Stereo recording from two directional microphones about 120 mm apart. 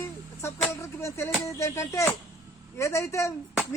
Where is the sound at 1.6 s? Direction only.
25° left (ahead or behind).